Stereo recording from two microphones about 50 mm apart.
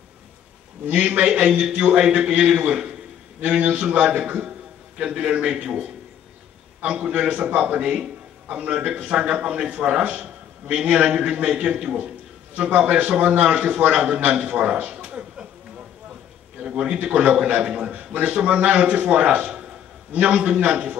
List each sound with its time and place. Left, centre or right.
0.8 s a man's voice: right
1.2 s a man's voice: centre
6.9 s a man's voice: centre
14.9 s a sound: centre
16.6 s a man's voice: centre